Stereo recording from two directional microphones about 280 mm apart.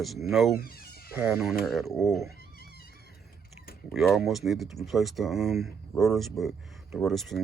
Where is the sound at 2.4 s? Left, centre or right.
Left.